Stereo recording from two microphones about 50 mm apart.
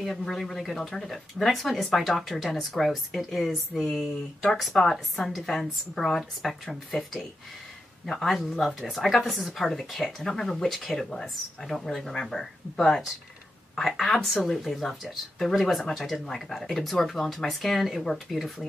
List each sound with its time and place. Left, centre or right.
0.0 s speech: centre